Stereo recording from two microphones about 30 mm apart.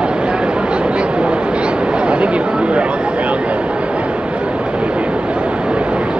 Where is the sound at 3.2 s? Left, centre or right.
Right.